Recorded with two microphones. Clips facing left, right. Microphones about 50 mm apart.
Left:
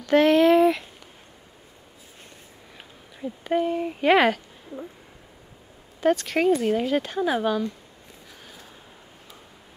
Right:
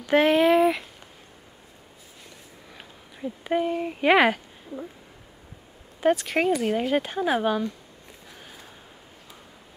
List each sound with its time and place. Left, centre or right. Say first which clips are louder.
0.0 s a sound: left 2 dB; centre
3.2 s speech: left 1 dB; centre
5.9 s speech: even; centre